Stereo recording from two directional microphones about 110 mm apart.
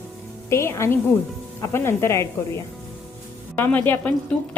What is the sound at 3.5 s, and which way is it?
Speech, 20° left (ahead or behind).